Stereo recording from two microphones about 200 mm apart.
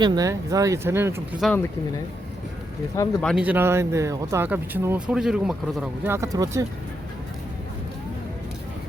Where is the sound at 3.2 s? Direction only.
5° right (ahead or behind).